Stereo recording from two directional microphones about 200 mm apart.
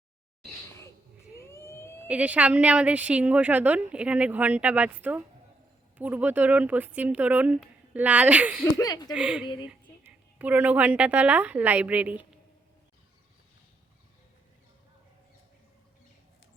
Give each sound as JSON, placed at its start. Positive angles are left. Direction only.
{"t": 1.5, "sound": "police car", "side_deg": 15}
{"t": 2.0, "sound": "a woman's voice", "side_deg": -5}
{"t": 8.7, "sound": "speech", "side_deg": 20}
{"t": 9.1, "sound": "a woman's voice", "side_deg": -5}